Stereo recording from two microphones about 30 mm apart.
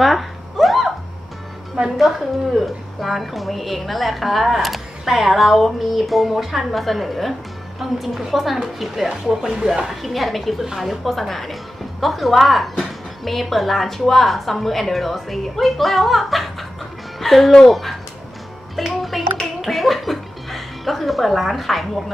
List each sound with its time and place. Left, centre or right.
0.0 s a sound: centre
2.0 s a woman's voice: centre
6.7 s speech: centre
7.8 s speech: centre
9.5 s speech: right
9.8 s speech: centre